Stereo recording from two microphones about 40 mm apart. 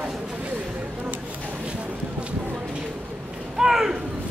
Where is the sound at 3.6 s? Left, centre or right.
Centre.